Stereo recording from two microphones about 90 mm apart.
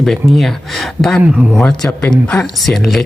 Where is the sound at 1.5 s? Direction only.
10° left (ahead or behind).